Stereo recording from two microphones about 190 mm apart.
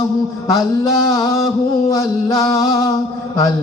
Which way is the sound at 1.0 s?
20° left (ahead or behind).